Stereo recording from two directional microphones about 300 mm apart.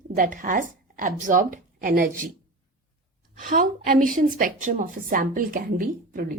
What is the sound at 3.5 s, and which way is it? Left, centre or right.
A woman's voice, right.